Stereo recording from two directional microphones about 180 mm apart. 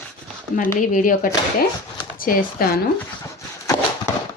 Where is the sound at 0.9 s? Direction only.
50° left (ahead or behind).